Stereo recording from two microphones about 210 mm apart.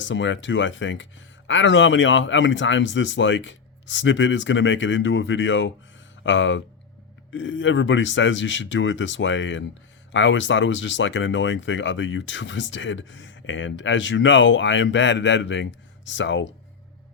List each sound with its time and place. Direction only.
0.0 s speech: 60° left (ahead or behind)